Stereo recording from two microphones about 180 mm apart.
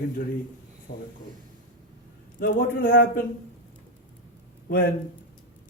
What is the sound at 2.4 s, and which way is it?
Speech, 50° left (ahead or behind).